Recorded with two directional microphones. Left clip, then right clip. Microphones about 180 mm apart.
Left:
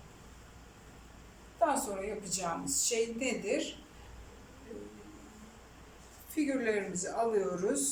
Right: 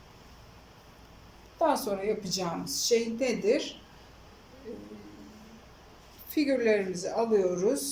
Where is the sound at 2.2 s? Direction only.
30° right (ahead or behind).